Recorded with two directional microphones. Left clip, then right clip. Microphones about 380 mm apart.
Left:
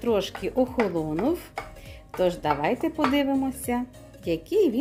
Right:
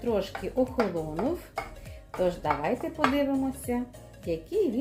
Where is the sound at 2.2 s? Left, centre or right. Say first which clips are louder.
Left 3 dB; left.